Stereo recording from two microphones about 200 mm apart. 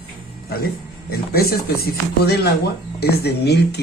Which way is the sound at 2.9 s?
55° left (ahead or behind).